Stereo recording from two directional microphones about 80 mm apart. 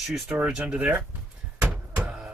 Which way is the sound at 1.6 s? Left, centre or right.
Centre.